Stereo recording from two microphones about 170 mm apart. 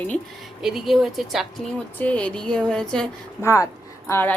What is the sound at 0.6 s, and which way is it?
A woman's voice, centre (ahead or behind).